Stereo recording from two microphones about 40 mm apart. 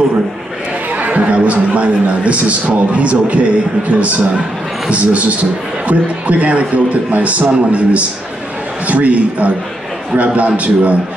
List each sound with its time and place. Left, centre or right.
0.9 s a man's voice: right